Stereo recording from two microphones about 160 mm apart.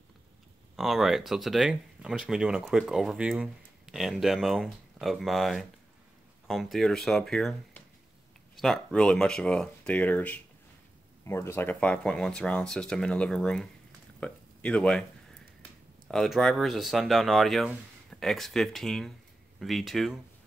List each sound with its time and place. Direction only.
0.7 s speech: centre (ahead or behind)
16.1 s speech: 5° left (ahead or behind)